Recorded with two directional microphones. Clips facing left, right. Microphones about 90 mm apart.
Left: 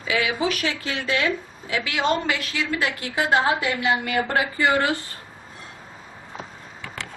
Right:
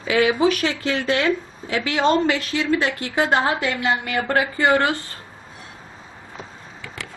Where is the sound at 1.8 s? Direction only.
30° right (ahead or behind).